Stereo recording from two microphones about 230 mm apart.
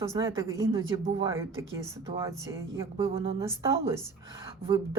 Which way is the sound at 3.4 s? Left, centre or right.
Centre.